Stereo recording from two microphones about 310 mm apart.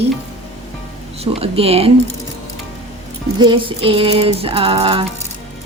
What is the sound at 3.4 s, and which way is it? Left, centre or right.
A woman's voice, centre.